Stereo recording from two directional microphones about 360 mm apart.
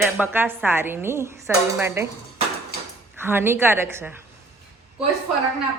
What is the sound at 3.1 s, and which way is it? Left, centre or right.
Speech, centre.